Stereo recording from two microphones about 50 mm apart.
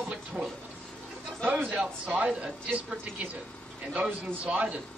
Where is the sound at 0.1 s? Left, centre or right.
Right.